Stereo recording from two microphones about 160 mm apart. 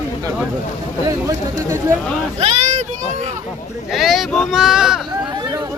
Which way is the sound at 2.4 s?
50° right (ahead or behind).